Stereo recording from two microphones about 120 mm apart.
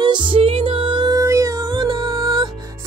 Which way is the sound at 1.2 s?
25° right (ahead or behind).